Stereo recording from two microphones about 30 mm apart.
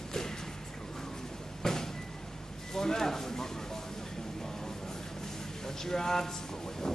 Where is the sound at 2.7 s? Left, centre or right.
Centre.